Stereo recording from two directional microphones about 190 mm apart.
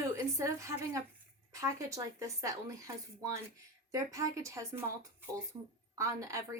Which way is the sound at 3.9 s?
15° right (ahead or behind).